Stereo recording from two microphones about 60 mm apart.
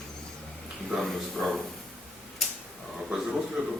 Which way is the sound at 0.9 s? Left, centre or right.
Centre.